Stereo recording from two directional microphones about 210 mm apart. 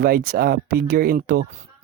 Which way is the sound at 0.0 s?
45° right (ahead or behind).